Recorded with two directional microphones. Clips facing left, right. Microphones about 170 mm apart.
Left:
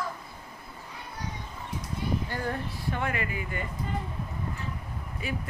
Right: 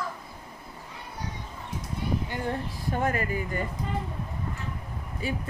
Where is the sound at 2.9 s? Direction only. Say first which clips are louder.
Right 4 dB; 40° right (ahead or behind).